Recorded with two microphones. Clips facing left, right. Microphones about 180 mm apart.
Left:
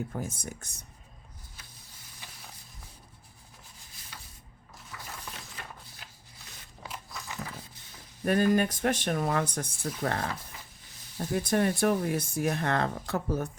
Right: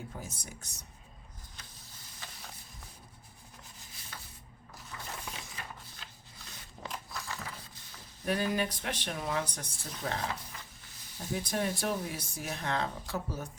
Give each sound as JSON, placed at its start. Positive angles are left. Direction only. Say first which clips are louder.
{"t": 0.1, "sound": "speech", "louder": "left 8 dB", "side_deg": 50}
{"t": 6.8, "sound": "biting", "louder": "right 1 dB", "side_deg": 5}
{"t": 8.2, "sound": "speech", "louder": "left 7 dB", "side_deg": 50}
{"t": 11.3, "sound": "speech", "louder": "left 6 dB", "side_deg": 55}